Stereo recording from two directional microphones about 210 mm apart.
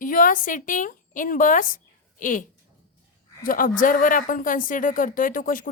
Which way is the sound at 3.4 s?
40° left (ahead or behind).